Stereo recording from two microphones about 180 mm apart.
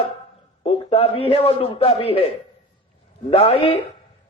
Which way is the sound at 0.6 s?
35° left (ahead or behind).